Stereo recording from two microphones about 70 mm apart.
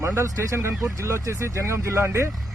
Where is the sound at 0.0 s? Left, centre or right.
Right.